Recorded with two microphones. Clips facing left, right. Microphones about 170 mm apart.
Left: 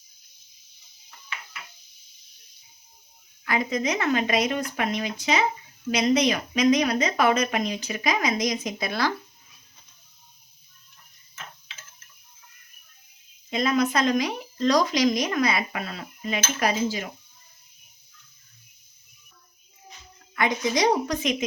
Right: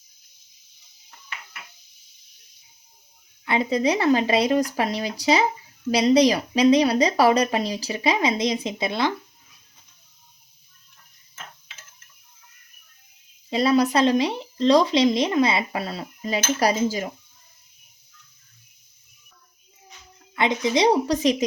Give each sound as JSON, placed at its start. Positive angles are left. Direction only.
{"t": 3.4, "sound": "speech", "side_deg": -30}
{"t": 13.5, "sound": "speech", "side_deg": -35}
{"t": 20.3, "sound": "a woman's voice", "side_deg": -25}